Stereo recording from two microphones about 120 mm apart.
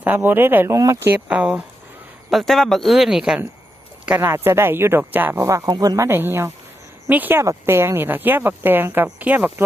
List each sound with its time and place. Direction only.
0.0 s speech: 15° right (ahead or behind); by 6.1 s 35° right (ahead or behind)
6.1 s speech: 20° right (ahead or behind)